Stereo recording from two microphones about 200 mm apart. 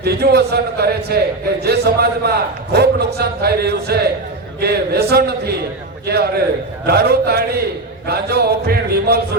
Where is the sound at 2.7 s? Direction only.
55° right (ahead or behind).